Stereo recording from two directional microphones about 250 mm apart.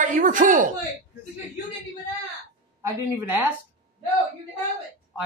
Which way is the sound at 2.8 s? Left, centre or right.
Centre.